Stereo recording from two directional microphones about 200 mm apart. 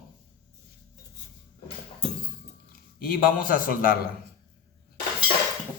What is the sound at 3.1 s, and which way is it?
Speech, 45° left (ahead or behind).